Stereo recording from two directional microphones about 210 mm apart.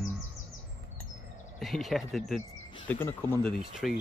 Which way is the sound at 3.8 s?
5° right (ahead or behind).